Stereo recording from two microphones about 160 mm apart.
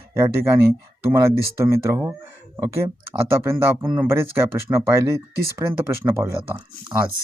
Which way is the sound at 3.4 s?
15° right (ahead or behind).